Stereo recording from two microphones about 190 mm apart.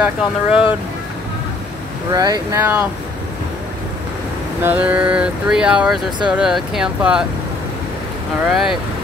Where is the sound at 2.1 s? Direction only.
20° right (ahead or behind).